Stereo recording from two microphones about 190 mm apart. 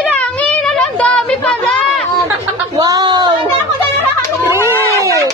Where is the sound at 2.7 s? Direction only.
20° right (ahead or behind).